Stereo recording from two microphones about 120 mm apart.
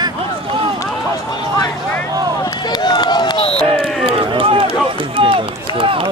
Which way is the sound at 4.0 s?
50° right (ahead or behind).